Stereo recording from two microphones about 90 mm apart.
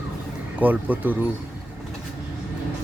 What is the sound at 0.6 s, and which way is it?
Speech, 20° right (ahead or behind).